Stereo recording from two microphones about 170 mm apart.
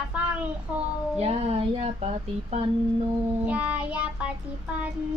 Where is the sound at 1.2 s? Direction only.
35° right (ahead or behind).